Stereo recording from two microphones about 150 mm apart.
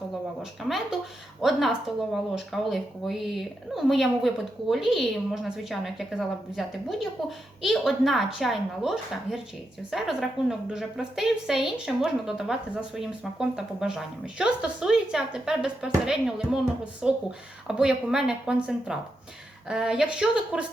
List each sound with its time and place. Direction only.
1.4 s speech: centre (ahead or behind)